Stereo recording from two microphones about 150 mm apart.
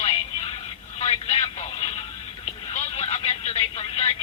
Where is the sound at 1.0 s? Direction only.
45° left (ahead or behind).